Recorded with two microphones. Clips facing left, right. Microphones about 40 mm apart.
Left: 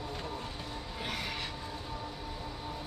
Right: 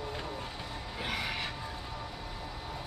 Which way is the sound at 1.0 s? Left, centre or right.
Centre.